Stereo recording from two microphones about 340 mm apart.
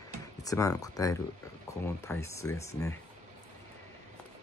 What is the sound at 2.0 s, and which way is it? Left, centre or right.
Speech, centre.